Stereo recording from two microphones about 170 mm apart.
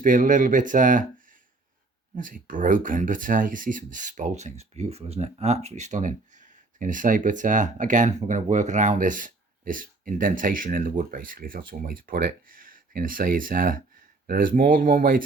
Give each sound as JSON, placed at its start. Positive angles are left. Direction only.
{"t": 0.0, "sound": "speech", "side_deg": -50}